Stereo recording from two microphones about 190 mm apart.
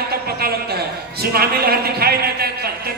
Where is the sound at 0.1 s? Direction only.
55° right (ahead or behind).